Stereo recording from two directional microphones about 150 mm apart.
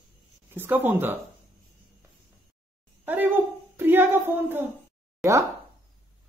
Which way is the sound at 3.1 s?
15° right (ahead or behind).